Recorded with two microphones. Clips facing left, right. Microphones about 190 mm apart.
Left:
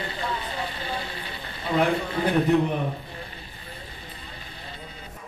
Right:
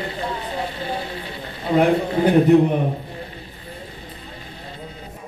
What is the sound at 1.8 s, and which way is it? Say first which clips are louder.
A man's voice: right 7 dB; 30° right (ahead or behind).